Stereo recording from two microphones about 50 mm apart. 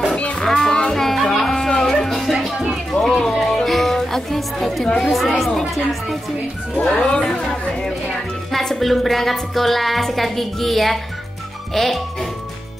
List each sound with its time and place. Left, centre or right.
0.1 s music: left
0.4 s child singing: centre
0.7 s music: centre
4.9 s speech: centre
6.9 s speech: centre
8.5 s a woman's voice: centre